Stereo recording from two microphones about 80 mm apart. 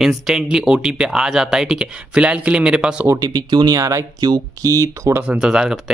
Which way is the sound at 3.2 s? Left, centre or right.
Right.